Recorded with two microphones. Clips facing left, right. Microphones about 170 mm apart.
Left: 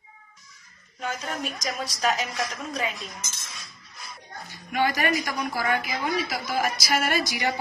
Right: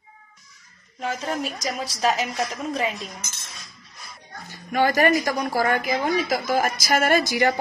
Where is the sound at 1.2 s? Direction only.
30° right (ahead or behind).